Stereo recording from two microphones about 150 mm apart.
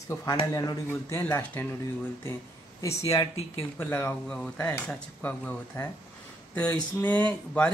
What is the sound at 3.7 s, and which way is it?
Speech, 15° left (ahead or behind).